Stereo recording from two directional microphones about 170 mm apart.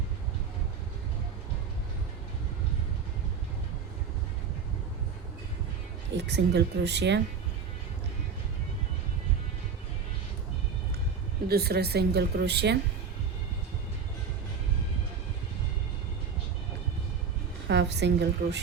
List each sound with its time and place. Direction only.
6.1 s speech: 80° right
11.4 s speech: 70° right (ahead or behind)
17.7 s a woman's voice: 90° right